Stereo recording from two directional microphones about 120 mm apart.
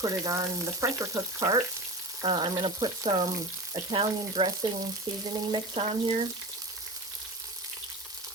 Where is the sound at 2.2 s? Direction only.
45° right (ahead or behind).